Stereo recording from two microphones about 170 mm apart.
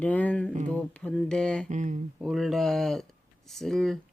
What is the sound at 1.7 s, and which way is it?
Speech, 45° right (ahead or behind).